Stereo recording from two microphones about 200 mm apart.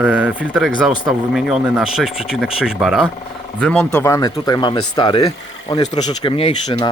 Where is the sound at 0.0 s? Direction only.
5° right (ahead or behind).